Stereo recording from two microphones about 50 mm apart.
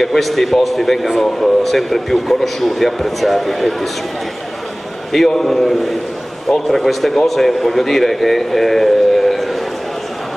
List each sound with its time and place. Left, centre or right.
0.0 s a man's voice: centre
5.1 s a man's voice: centre